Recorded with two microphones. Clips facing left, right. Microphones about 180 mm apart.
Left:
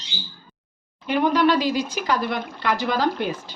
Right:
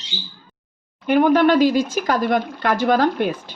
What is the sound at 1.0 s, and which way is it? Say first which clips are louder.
Speech: right 5 dB; 55° right (ahead or behind).